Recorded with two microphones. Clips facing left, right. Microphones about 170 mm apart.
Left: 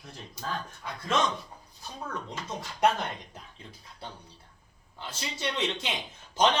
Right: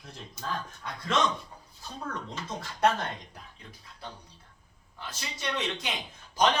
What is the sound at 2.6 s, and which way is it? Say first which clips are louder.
Speech: even; 15° left (ahead or behind).